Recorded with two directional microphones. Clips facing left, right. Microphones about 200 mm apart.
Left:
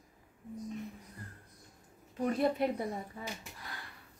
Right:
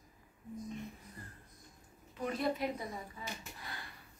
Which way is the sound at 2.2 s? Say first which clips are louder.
Left 5 dB; 50° left (ahead or behind).